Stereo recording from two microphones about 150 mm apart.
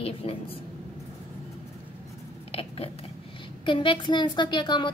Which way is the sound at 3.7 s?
35° left (ahead or behind).